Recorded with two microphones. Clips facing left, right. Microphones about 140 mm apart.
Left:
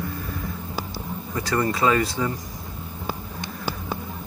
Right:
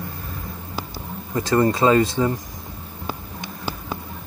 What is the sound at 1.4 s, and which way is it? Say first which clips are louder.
Speech: right 5 dB; 25° right (ahead or behind).